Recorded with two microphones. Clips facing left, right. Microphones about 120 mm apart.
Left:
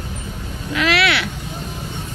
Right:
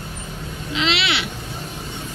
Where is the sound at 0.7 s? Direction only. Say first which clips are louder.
Left 4 dB; 25° right (ahead or behind).